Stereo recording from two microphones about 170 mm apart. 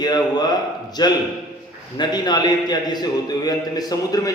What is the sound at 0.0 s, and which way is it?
A man's voice, 25° left (ahead or behind).